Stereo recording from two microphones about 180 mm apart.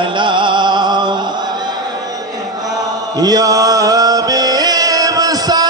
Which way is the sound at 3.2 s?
20° right (ahead or behind).